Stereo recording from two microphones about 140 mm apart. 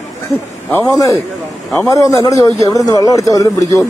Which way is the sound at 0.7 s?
20° left (ahead or behind).